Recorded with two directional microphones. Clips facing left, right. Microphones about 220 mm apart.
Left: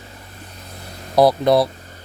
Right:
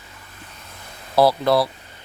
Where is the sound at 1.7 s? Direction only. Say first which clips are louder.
Left 5 dB; 40° left (ahead or behind).